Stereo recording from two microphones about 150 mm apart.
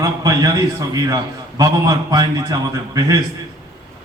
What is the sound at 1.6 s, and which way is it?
A man's voice, 25° right (ahead or behind).